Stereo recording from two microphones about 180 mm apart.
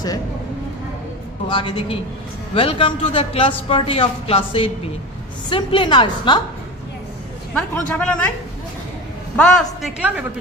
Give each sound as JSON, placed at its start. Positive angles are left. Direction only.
{"t": 1.5, "sound": "a woman's voice", "side_deg": 25}
{"t": 7.5, "sound": "a man's voice", "side_deg": 5}
{"t": 9.3, "sound": "a man's voice", "side_deg": 5}